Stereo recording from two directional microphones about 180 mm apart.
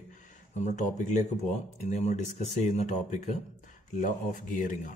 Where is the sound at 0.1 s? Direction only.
45° left (ahead or behind).